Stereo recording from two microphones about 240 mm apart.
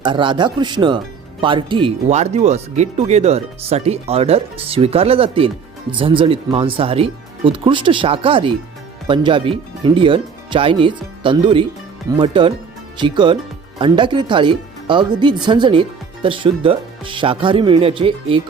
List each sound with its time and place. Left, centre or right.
0.0 s speech: centre